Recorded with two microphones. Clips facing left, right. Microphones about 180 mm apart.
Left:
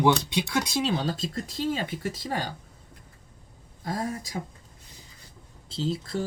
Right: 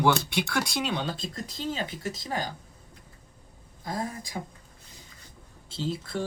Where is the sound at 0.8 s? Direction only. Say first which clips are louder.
Left 3 dB; 40° left (ahead or behind); by 2.5 s 55° left (ahead or behind).